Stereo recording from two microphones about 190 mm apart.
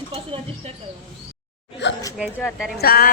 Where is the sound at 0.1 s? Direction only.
30° right (ahead or behind).